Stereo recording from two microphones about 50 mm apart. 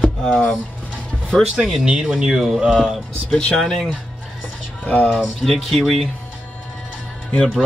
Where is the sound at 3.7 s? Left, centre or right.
Centre.